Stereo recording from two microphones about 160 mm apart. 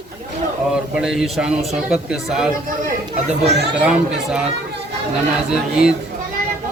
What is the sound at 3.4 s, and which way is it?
Speech, 90° right.